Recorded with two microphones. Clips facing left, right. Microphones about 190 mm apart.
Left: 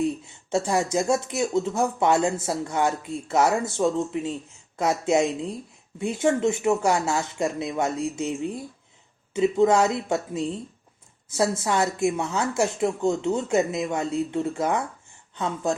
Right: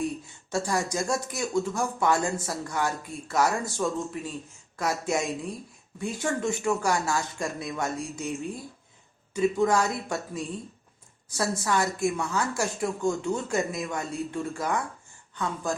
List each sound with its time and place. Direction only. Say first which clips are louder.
0.5 s speech: left 5 dB; 25° left (ahead or behind)